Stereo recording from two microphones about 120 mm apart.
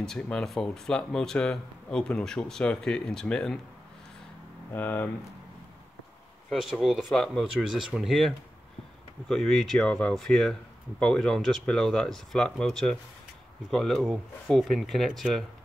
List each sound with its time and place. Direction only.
0.0 s speech: 5° left (ahead or behind)
4.7 s speech: 15° left (ahead or behind)
6.5 s speech: centre (ahead or behind)